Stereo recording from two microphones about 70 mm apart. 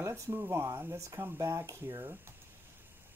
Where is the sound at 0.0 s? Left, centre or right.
Right.